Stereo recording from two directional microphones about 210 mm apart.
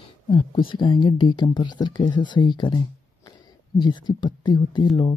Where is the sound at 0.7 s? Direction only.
20° left (ahead or behind).